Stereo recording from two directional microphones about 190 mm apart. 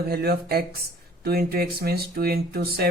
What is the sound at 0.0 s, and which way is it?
Speech, 55° right (ahead or behind).